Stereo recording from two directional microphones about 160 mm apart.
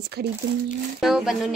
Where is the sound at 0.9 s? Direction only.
Centre (ahead or behind).